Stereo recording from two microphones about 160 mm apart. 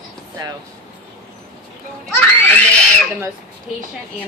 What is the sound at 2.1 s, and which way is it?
Speech, 10° left (ahead or behind).